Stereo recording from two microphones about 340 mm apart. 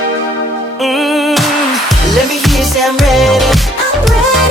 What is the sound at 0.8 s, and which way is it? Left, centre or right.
Music, centre.